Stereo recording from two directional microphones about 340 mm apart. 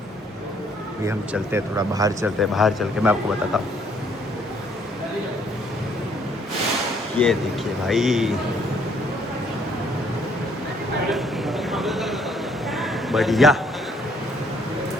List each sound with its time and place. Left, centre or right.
1.0 s speech: centre
7.2 s speech: centre
11.1 s a sound: centre